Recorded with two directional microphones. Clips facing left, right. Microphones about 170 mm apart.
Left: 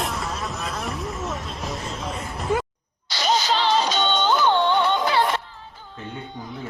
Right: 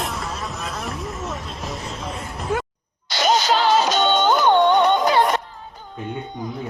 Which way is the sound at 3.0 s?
50° right (ahead or behind).